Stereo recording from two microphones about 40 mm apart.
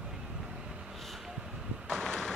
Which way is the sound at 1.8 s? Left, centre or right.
Centre.